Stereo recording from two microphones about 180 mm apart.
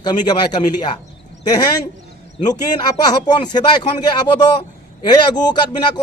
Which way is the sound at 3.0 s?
20° left (ahead or behind).